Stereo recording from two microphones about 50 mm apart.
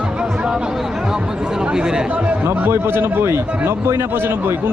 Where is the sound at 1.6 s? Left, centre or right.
Centre.